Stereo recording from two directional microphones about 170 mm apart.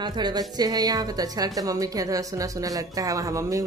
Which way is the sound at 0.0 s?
25° right (ahead or behind).